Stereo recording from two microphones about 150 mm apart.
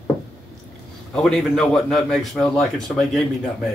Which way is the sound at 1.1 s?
Centre (ahead or behind).